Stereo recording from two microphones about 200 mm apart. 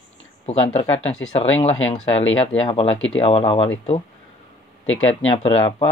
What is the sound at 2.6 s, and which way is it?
Speech, 30° left (ahead or behind).